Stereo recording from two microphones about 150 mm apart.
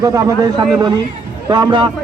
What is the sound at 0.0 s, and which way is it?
Speech, 25° right (ahead or behind).